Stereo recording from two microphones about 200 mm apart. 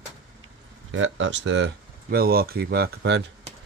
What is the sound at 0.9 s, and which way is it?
Speech, 75° right (ahead or behind).